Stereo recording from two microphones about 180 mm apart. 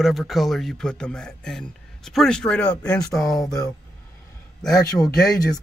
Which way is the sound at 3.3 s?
20° left (ahead or behind).